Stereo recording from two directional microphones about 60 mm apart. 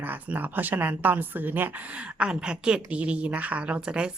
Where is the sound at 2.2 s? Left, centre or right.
Centre.